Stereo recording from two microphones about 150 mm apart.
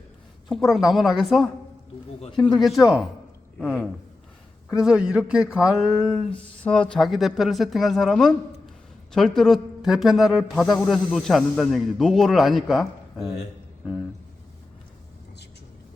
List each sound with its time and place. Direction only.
0.4 s speech: centre (ahead or behind)
5.9 s a sound: 25° left (ahead or behind)
6.7 s speech: 5° left (ahead or behind)